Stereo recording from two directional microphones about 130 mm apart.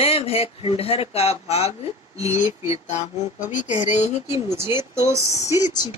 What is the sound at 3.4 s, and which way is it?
Speech, 75° left (ahead or behind).